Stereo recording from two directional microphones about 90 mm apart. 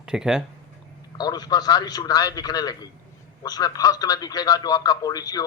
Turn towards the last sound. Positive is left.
turn(degrees=45)  # may be behind; listen again after turning